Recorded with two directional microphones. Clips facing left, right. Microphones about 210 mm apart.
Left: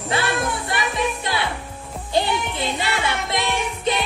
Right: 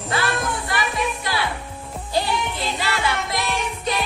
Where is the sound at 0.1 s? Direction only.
25° left (ahead or behind).